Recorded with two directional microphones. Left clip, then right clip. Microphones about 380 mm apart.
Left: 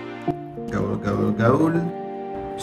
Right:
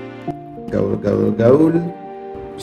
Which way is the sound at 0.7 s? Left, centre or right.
Right.